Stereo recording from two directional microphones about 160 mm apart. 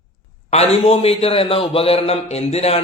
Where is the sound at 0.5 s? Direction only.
40° left (ahead or behind).